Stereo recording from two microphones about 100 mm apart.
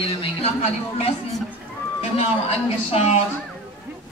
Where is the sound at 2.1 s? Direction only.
90° left.